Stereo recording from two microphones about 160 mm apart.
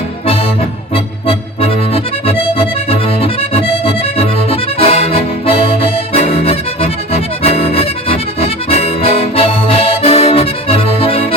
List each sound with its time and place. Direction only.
0.9 s accordion: 35° left (ahead or behind)